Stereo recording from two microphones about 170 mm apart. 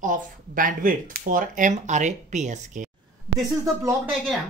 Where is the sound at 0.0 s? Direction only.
50° right (ahead or behind).